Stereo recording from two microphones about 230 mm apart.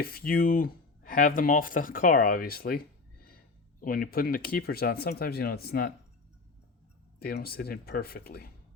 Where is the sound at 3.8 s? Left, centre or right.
Left.